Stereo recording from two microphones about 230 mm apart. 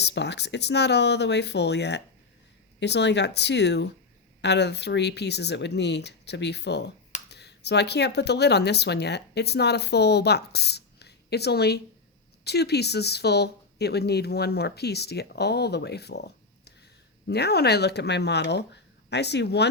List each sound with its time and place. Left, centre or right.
0.0 s a woman's voice: left